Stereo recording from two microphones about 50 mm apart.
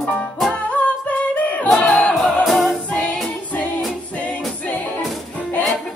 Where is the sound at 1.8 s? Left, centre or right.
Left.